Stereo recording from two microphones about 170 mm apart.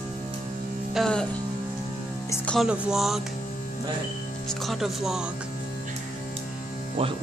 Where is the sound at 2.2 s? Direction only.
15° left (ahead or behind).